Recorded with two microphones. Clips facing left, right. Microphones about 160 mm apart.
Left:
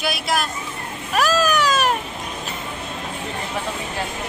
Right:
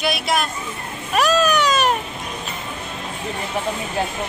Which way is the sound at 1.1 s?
Centre (ahead or behind).